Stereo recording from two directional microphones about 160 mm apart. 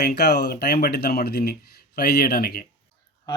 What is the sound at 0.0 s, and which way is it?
Speech, 85° left.